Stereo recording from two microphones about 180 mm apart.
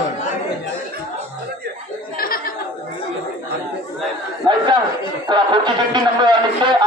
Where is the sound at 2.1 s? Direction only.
55° left (ahead or behind).